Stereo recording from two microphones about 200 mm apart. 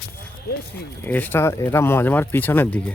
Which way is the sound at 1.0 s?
10° left (ahead or behind).